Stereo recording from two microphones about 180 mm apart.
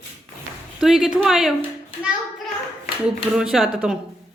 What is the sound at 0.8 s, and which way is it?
Speech, centre (ahead or behind).